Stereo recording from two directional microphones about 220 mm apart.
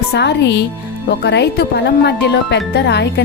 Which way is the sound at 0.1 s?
50° left (ahead or behind).